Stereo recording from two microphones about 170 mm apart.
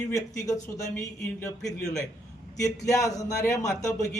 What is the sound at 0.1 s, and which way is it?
A man's voice, 20° left (ahead or behind).